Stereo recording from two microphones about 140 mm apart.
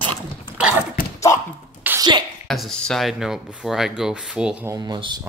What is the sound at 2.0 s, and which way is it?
Sneeze, 30° right (ahead or behind).